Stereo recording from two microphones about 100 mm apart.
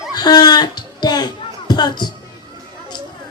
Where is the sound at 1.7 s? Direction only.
45° left (ahead or behind).